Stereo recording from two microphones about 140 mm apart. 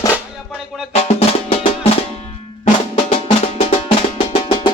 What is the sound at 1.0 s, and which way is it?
Music, 45° left (ahead or behind).